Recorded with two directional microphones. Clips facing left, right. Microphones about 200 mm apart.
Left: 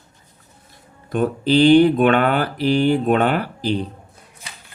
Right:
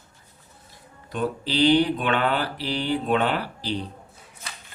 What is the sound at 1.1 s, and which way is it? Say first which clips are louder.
Mantra: left 9 dB; 50° left (ahead or behind).